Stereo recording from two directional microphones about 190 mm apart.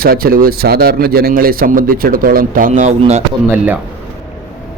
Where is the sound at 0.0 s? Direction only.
50° right (ahead or behind).